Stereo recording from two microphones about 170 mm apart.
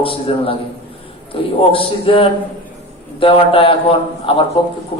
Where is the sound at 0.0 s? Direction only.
35° left (ahead or behind).